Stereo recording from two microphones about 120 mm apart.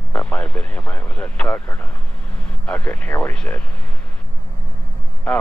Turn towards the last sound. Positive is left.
turn(degrees=5)  # may be behind; listen again after turning